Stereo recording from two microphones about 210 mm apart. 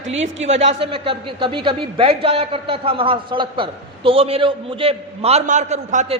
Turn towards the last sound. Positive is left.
turn(degrees=-35)  # may be behind; listen again after turning